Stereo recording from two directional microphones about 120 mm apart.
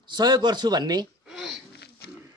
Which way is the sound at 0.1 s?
35° right (ahead or behind).